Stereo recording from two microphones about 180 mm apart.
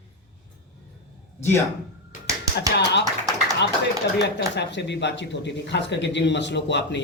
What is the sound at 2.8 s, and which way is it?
Speech, 75° left (ahead or behind).